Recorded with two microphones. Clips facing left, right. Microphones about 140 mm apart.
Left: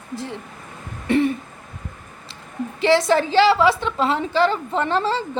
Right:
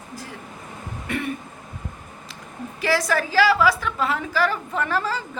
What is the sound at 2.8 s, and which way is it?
A woman's voice, 25° left (ahead or behind).